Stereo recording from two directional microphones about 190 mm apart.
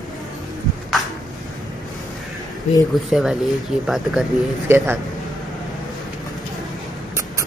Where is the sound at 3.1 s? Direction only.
Centre (ahead or behind).